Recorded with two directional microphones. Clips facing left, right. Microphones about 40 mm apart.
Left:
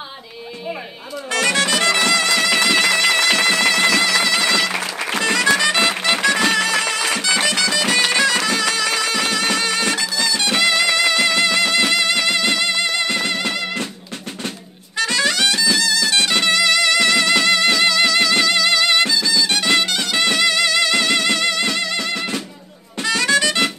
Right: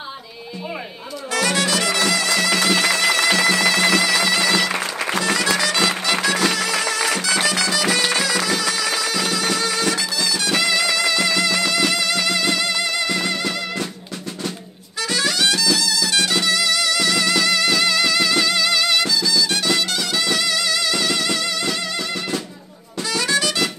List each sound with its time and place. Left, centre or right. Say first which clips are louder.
1.3 s bagpipes: left 2 dB; left
2.0 s music: left 2 dB; left
5.2 s music: left 5 dB; left
15.0 s music: left 3 dB; left